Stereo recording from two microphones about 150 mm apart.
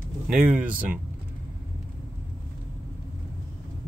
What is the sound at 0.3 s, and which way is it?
Speech, 5° right (ahead or behind).